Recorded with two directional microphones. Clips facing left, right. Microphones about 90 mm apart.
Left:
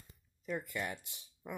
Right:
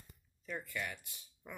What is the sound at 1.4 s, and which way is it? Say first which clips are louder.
Speech: left 6 dB; 15° left (ahead or behind).